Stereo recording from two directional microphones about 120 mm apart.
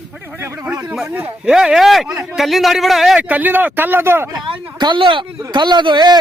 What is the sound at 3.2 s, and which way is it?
Speech, 15° right (ahead or behind).